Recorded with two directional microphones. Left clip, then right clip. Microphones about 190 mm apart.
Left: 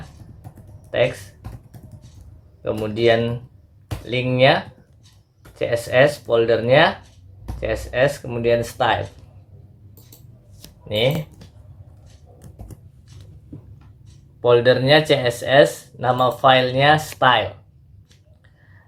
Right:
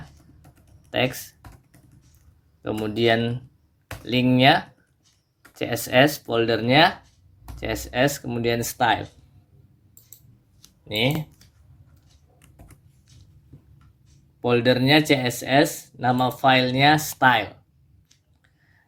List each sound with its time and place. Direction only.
0.9 s speech: 40° right (ahead or behind)
2.6 s speech: 40° right (ahead or behind)
10.6 s a sound: 25° left (ahead or behind)
14.4 s speech: 40° right (ahead or behind)